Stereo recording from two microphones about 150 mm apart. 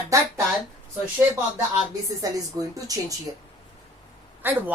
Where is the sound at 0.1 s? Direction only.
20° right (ahead or behind).